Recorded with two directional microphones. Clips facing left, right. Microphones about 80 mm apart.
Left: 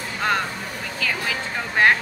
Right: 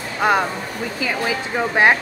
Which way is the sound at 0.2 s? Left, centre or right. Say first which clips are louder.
Right 6 dB; centre.